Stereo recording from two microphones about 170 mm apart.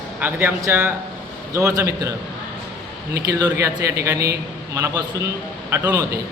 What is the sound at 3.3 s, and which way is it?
A man's voice, 20° right (ahead or behind).